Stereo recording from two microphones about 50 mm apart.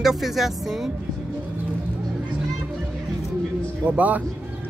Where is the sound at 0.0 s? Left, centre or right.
Centre.